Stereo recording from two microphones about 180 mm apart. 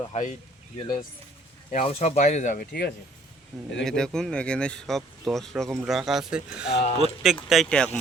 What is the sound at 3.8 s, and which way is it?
Speech, 5° left (ahead or behind).